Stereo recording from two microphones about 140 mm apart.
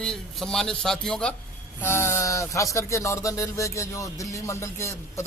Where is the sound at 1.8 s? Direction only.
20° left (ahead or behind).